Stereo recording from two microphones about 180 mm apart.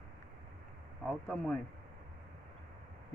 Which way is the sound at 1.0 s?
5° left (ahead or behind).